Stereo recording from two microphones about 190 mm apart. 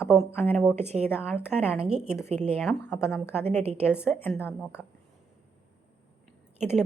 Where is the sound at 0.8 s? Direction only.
35° right (ahead or behind).